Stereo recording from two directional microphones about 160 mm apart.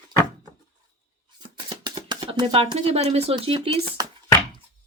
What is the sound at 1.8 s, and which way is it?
Speech, 30° right (ahead or behind).